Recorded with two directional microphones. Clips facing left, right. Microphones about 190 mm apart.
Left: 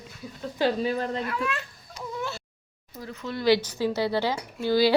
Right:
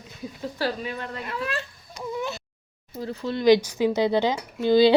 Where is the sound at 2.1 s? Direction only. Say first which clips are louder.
Right 2 dB; 20° right (ahead or behind).